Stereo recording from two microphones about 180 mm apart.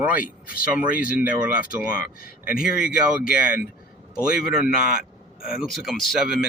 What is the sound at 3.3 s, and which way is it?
Speech, 55° left (ahead or behind).